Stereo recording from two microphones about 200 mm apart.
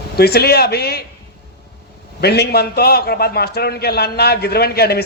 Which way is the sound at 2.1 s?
55° left (ahead or behind).